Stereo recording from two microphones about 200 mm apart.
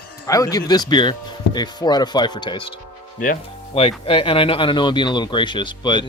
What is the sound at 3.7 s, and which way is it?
A man's voice, 25° left (ahead or behind).